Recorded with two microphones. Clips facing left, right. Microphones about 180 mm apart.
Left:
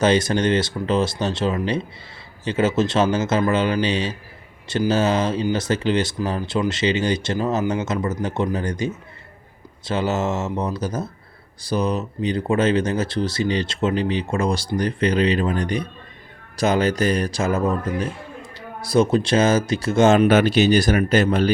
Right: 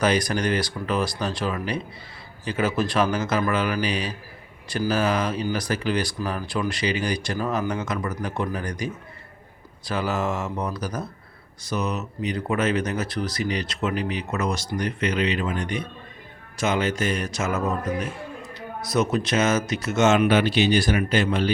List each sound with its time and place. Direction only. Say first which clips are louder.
0.0 s speech: left 4 dB; 25° left (ahead or behind); by 21.5 s 40° left (ahead or behind)